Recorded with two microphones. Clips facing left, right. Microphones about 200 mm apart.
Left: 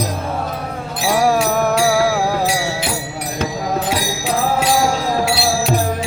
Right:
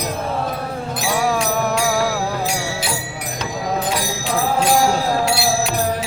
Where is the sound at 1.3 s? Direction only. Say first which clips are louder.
Left 4 dB; 55° left (ahead or behind).